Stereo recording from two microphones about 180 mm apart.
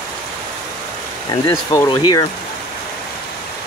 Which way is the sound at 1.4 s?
15° left (ahead or behind).